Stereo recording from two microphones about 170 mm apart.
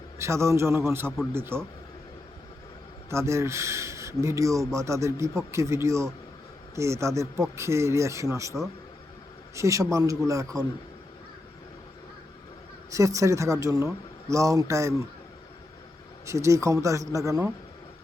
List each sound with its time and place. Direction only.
0.2 s speech: 15° right (ahead or behind)
3.1 s speech: 15° right (ahead or behind)
9.6 s speech: 20° right (ahead or behind)
12.9 s speech: 20° right (ahead or behind)
16.2 s speech: 15° right (ahead or behind)